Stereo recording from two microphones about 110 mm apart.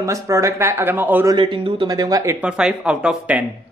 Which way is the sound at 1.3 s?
45° right (ahead or behind).